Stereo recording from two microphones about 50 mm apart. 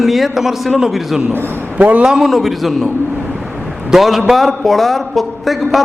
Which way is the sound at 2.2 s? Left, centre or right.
Centre.